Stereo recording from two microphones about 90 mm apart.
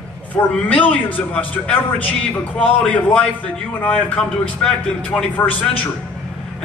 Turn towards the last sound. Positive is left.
turn(degrees=15)  # may be behind; listen again after turning